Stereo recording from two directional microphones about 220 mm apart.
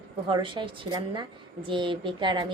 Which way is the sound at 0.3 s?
20° right (ahead or behind).